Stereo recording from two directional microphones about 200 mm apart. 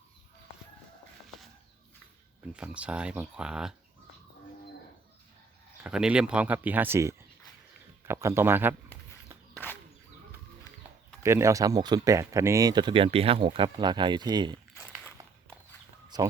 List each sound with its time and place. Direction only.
2.5 s speech: 5° right (ahead or behind)
5.8 s speech: 5° right (ahead or behind)
11.2 s speech: 15° right (ahead or behind)
16.0 s a sound: 20° right (ahead or behind)